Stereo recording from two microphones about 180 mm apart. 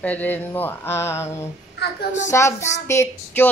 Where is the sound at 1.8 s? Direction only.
65° left (ahead or behind).